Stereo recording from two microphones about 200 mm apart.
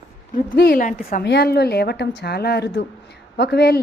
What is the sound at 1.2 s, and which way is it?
A woman's voice, 55° left (ahead or behind).